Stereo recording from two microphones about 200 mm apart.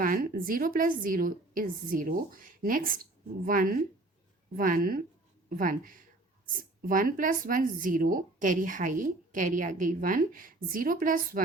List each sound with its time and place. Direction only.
0.0 s a woman's voice: 45° right (ahead or behind)